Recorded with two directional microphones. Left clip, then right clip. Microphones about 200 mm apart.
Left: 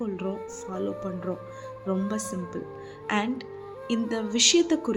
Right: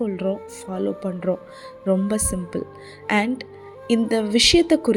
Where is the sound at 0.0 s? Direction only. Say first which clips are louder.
Right 7 dB; 25° right (ahead or behind).